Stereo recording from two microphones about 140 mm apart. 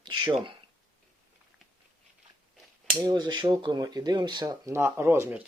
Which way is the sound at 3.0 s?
30° right (ahead or behind).